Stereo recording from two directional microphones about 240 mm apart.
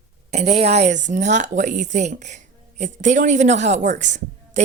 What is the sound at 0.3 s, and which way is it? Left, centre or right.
A woman's voice, right.